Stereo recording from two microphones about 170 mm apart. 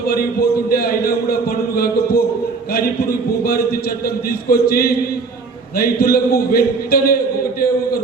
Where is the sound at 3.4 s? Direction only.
65° left (ahead or behind).